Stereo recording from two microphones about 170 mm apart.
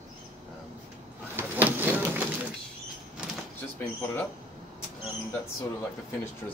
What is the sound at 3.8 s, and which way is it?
Speech, 10° left (ahead or behind).